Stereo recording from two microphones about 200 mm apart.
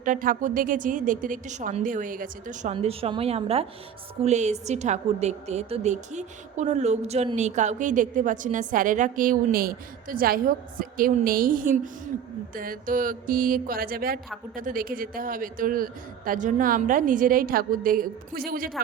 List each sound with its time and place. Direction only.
0.0 s a woman's voice: 40° right (ahead or behind)
2.7 s a woman's voice: 30° right (ahead or behind); by 18.7 s 45° right (ahead or behind)